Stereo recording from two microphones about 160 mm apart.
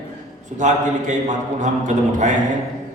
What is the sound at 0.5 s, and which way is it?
A man's voice, 50° right (ahead or behind).